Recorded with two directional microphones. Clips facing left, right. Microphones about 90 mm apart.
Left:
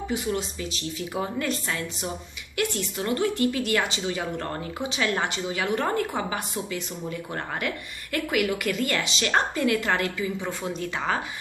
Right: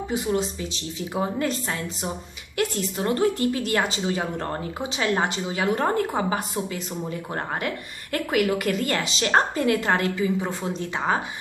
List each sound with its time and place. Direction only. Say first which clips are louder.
0.1 s speech: right 4 dB; 30° right (ahead or behind)